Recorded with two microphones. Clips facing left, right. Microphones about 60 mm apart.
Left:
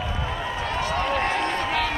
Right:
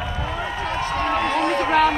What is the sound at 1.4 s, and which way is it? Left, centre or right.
Run, right.